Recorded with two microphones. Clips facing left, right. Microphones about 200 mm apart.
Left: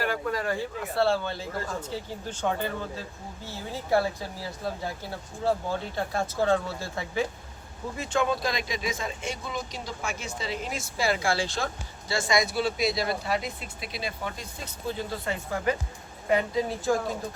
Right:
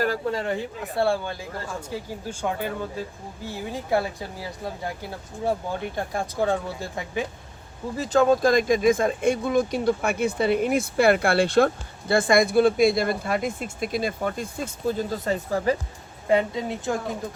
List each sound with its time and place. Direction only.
0.0 s speech: 30° right (ahead or behind); by 4.1 s 15° right (ahead or behind)
5.5 s speech: 15° right (ahead or behind)
7.9 s speech: 35° right (ahead or behind)
16.3 s a woman's voice: 25° right (ahead or behind)